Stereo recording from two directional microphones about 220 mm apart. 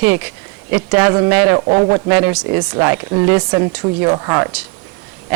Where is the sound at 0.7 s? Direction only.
10° right (ahead or behind).